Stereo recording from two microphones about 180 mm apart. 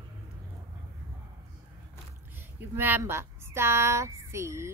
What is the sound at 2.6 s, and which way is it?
Speech, 10° right (ahead or behind).